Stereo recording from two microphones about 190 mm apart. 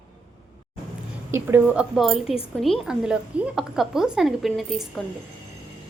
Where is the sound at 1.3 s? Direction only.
10° right (ahead or behind).